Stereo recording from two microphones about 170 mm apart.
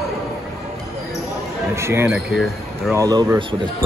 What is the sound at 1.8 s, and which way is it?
Speech, 15° right (ahead or behind).